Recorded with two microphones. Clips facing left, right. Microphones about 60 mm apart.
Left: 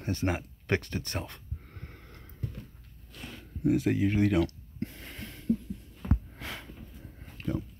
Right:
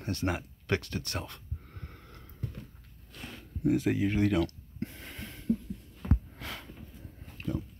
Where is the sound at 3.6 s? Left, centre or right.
Centre.